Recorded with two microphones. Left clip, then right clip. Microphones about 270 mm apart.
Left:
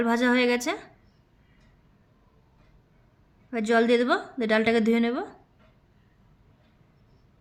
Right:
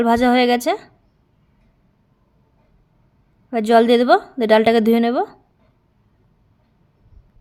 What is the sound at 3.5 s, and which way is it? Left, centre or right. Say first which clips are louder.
A woman's voice: right 9 dB; centre.